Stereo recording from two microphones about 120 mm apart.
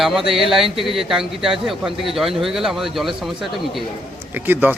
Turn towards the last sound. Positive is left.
turn(degrees=-15)  # may be behind; listen again after turning